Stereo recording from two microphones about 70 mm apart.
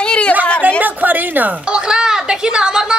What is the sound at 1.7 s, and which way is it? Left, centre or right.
Speech, centre.